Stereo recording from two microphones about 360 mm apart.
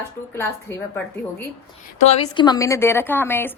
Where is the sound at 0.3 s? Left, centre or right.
Centre.